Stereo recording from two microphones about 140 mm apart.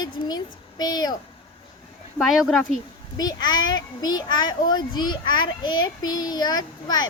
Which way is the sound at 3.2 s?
30° left (ahead or behind).